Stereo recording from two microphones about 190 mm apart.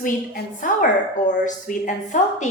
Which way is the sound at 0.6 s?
40° left (ahead or behind).